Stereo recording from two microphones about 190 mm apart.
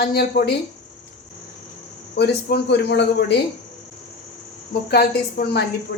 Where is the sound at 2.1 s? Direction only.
60° left (ahead or behind).